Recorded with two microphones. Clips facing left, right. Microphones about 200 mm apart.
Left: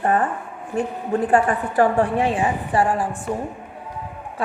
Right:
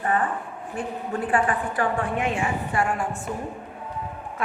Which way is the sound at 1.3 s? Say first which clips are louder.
Left 3 dB; 40° left (ahead or behind).